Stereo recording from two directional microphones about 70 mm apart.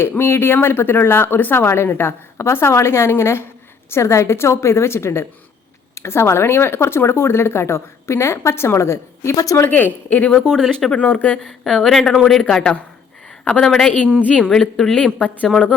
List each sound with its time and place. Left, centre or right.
0.0 s speech: left
9.6 s speech: left
10.3 s speech: centre
11.0 s speech: left
11.4 s speech: centre
14.0 s speech: left
14.3 s speech: centre